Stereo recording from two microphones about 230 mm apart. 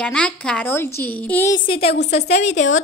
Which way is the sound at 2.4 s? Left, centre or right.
Left.